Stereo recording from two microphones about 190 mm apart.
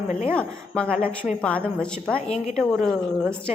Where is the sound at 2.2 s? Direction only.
35° left (ahead or behind).